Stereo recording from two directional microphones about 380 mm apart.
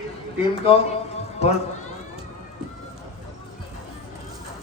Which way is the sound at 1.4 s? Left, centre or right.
Centre.